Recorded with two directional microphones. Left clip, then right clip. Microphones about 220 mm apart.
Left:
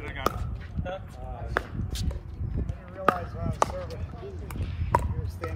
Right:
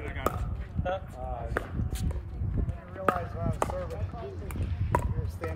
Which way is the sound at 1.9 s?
Centre (ahead or behind).